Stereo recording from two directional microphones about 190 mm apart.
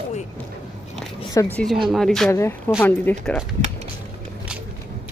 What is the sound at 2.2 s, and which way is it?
Speech, 15° left (ahead or behind).